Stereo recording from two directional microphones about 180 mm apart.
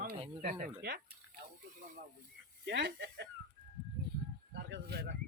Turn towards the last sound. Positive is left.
turn(degrees=-65)  # may be behind; listen again after turning